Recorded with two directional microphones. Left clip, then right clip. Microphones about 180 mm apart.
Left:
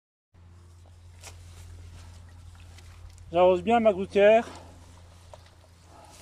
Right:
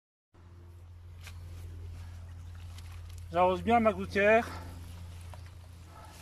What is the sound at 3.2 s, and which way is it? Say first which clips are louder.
Speech: left 6 dB; 20° left (ahead or behind).